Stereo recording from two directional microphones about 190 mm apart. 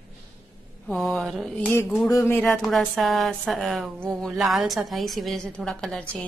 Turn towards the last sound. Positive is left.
turn(degrees=0)  # may be behind; listen again after turning